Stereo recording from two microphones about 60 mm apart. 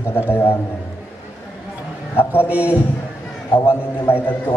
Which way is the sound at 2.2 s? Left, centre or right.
Left.